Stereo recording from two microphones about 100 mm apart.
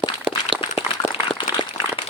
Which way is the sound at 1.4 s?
55° left (ahead or behind).